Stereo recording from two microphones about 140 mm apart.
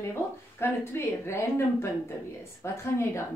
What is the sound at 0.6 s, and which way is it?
A woman's voice, 20° left (ahead or behind).